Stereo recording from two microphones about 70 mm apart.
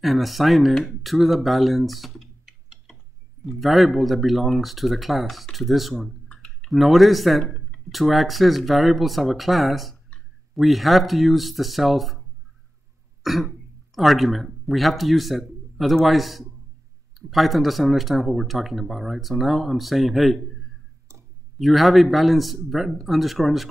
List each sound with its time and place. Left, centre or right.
0.0 s speech: centre
6.2 s clicking: centre
6.7 s speech: centre
13.2 s cough: centre
13.9 s speech: centre
21.5 s speech: centre